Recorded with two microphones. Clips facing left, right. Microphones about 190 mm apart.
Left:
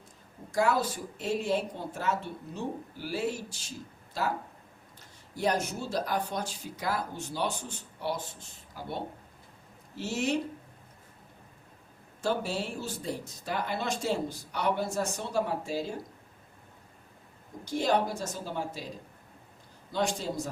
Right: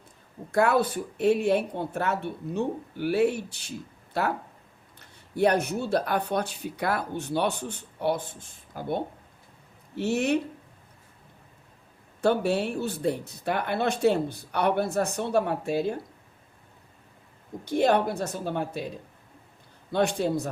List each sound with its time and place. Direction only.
0.5 s speech: 60° right (ahead or behind)
12.2 s speech: 60° right (ahead or behind)
17.7 s speech: 60° right (ahead or behind)